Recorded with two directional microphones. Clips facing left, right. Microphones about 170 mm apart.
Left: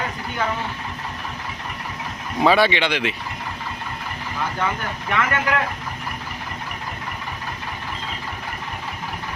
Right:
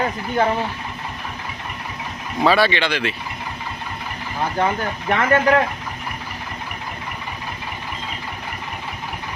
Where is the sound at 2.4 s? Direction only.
20° left (ahead or behind).